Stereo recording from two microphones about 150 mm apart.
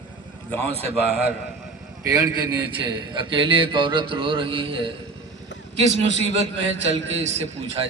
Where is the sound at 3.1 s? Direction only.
30° right (ahead or behind).